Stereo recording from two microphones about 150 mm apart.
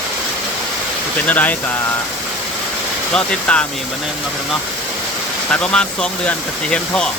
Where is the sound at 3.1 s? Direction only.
5° left (ahead or behind).